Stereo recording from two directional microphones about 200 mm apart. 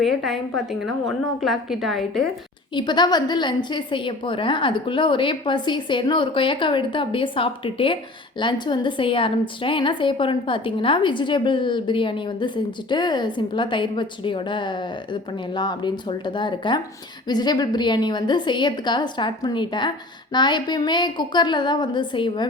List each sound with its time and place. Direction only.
0.0 s a woman's voice: centre (ahead or behind)
2.7 s a woman's voice: 20° left (ahead or behind)